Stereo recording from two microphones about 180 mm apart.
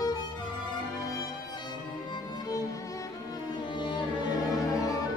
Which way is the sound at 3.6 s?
25° left (ahead or behind).